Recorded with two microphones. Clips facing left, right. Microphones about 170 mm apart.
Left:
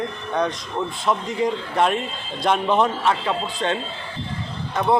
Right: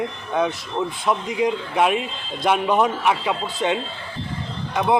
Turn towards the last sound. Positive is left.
turn(degrees=0)  # may be behind; listen again after turning